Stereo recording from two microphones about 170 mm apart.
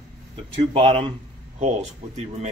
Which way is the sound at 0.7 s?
35° right (ahead or behind).